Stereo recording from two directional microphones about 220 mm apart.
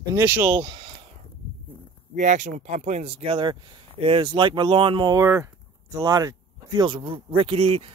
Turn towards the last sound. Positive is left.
turn(degrees=-30)  # may be behind; listen again after turning